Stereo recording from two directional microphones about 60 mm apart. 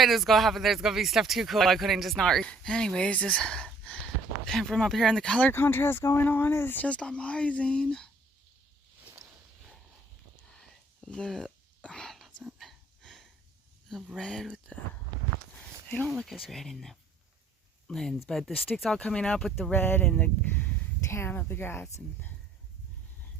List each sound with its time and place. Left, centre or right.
0.0 s speech: centre
2.2 s speech: centre
5.2 s speech: centre
5.5 s speech: left
6.8 s speech: centre
11.0 s speech: centre
11.8 s a sound: centre
14.2 s speech: centre
14.7 s speech: left
16.1 s speech: centre
19.7 s speech: left
21.1 s a woman's voice: left
21.3 s speech: left